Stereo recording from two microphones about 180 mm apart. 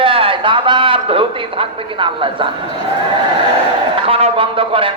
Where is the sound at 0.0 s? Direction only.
30° right (ahead or behind).